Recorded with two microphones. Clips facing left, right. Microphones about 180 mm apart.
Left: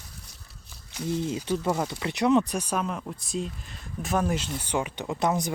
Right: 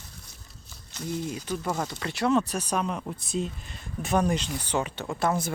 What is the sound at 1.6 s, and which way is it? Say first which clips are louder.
Speech: left 3 dB; 10° left (ahead or behind).